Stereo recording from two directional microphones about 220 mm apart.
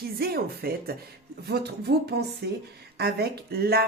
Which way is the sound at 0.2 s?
45° right (ahead or behind).